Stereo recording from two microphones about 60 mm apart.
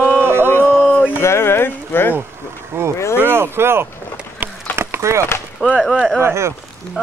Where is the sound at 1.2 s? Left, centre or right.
Left.